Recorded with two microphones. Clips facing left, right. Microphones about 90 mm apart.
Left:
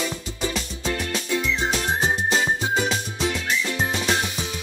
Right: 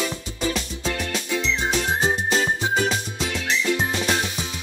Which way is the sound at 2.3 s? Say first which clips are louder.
Even; 5° left (ahead or behind).